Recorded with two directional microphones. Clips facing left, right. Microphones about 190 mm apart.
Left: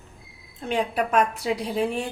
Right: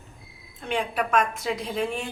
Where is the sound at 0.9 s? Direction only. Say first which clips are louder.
Left 1 dB; 35° left (ahead or behind).